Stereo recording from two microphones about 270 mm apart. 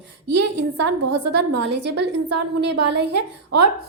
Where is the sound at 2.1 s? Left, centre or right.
Right.